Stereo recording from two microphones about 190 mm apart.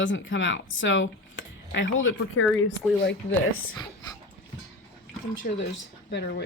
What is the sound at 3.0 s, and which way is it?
Speech, 90° left.